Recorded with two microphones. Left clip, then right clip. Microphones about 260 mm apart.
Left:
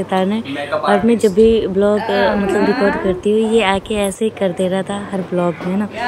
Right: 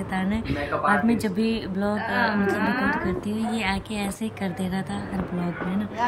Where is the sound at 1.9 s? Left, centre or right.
Right.